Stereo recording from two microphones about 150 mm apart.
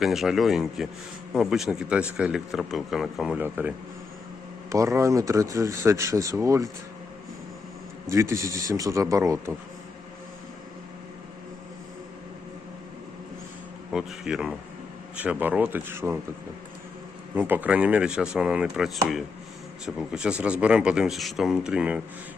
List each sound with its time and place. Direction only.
0.0 s a man's voice: centre (ahead or behind)
4.7 s speech: 20° right (ahead or behind)
8.1 s speech: 20° right (ahead or behind)
13.9 s a man's voice: 5° right (ahead or behind)
17.3 s a man's voice: 10° right (ahead or behind)